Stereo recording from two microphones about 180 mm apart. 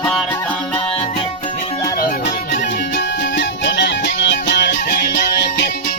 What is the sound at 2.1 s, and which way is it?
Music, 55° left (ahead or behind).